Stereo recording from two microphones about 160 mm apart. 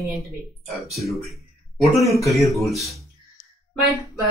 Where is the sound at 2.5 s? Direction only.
Centre (ahead or behind).